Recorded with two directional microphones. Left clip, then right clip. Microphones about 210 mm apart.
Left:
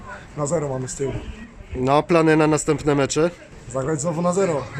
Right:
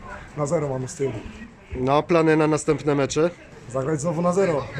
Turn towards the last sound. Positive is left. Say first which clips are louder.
# even
turn(degrees=0)  # may be behind; listen again after turning